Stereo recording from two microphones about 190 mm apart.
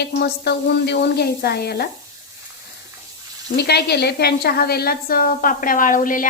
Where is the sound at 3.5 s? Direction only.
60° left (ahead or behind).